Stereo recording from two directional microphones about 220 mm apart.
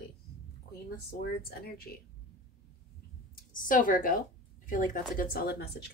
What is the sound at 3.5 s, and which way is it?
Speech, 40° left (ahead or behind).